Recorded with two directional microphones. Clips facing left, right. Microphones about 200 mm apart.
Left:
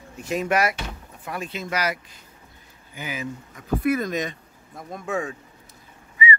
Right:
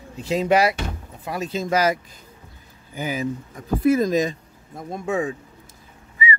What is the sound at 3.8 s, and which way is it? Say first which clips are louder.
Speech: right 6 dB; 25° right (ahead or behind).